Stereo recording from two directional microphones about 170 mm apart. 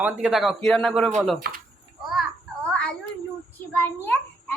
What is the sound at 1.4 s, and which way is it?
Speech, 60° right (ahead or behind).